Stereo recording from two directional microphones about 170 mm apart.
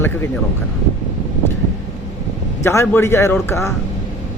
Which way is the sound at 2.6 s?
15° left (ahead or behind).